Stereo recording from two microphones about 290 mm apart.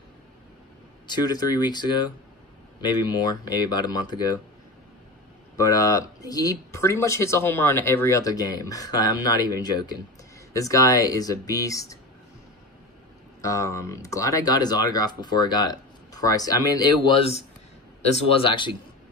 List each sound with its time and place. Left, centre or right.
1.0 s speech: centre
5.6 s speech: centre
13.4 s speech: centre